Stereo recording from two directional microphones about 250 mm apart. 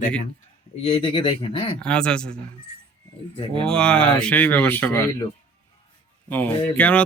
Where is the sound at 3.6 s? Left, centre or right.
Centre.